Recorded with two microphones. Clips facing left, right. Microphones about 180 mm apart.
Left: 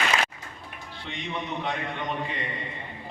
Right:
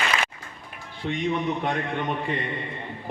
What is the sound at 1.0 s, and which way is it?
Speech, 50° right (ahead or behind).